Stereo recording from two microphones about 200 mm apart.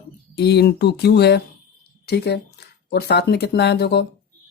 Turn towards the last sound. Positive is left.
turn(degrees=55)  # may be behind; listen again after turning